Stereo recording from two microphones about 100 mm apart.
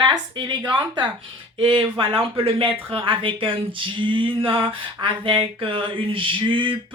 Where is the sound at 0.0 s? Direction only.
45° right (ahead or behind).